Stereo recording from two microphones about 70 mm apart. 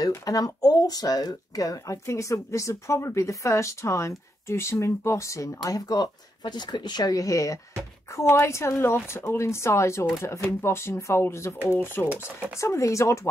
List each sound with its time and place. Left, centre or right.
0.2 s speech: left
8.1 s a woman's voice: left
11.5 s speech: right
11.8 s a woman's voice: left
12.5 s speech: left